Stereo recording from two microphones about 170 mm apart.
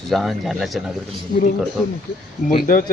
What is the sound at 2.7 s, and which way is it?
Speech, 55° left (ahead or behind).